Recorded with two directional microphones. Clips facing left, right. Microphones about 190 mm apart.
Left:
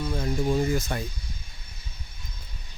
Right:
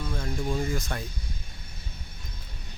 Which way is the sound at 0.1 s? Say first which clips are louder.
Left 5 dB; 15° left (ahead or behind).